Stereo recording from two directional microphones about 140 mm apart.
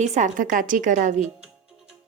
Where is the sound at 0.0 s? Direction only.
60° right (ahead or behind).